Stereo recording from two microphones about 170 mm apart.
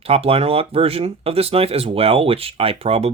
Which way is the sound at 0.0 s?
35° right (ahead or behind).